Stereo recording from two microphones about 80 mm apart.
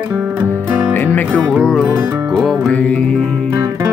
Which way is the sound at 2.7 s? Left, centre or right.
Centre.